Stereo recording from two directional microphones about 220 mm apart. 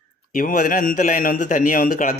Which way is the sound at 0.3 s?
35° left (ahead or behind).